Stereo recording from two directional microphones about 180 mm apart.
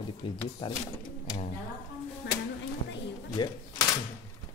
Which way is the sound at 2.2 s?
65° left (ahead or behind).